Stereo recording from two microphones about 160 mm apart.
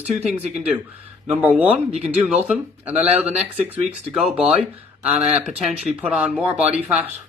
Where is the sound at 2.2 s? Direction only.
10° right (ahead or behind).